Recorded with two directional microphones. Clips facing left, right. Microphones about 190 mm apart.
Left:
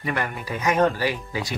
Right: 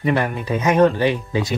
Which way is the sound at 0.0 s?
25° right (ahead or behind).